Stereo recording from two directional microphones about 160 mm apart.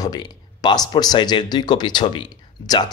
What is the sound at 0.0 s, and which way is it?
Speech, 25° left (ahead or behind).